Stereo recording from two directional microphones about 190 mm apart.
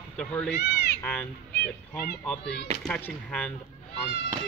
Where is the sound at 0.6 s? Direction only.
60° left (ahead or behind).